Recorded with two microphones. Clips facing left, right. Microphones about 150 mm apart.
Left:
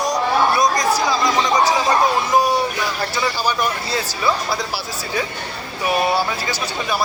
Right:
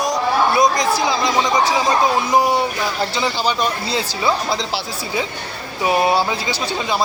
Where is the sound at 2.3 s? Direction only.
20° right (ahead or behind).